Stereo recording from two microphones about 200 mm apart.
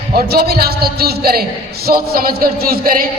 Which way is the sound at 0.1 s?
50° right (ahead or behind).